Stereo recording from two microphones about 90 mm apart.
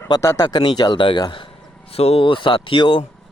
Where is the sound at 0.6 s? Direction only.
50° left (ahead or behind).